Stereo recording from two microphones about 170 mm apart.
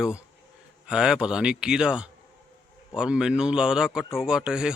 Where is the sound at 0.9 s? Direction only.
5° right (ahead or behind).